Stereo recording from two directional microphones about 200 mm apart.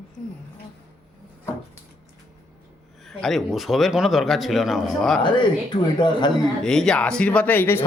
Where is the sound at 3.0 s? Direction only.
Centre (ahead or behind).